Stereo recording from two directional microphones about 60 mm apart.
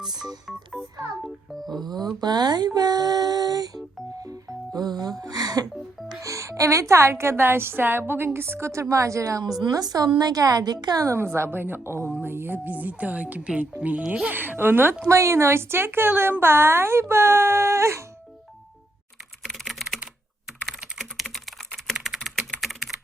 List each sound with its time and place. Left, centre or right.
1.5 s speech: centre
2.6 s female singing: right
4.2 s speech: right
6.2 s a woman's voice: right
11.1 s speech: right
14.3 s speech: right
15.0 s speech: right
19.5 s typing: centre
21.0 s typing: centre